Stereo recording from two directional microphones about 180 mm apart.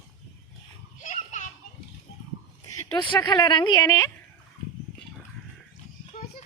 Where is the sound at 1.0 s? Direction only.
40° left (ahead or behind).